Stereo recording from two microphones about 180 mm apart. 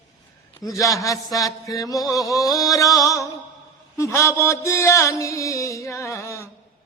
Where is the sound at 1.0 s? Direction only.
20° left (ahead or behind).